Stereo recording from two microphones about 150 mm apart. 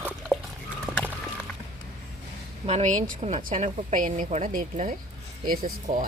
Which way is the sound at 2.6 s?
50° right (ahead or behind).